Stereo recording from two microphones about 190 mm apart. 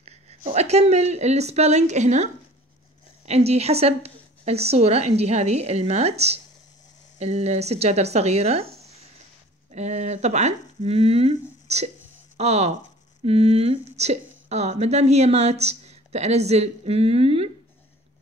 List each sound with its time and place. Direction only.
0.0 s speech: 35° right (ahead or behind)
3.3 s speech: 35° right (ahead or behind)
9.7 s speech: 35° right (ahead or behind)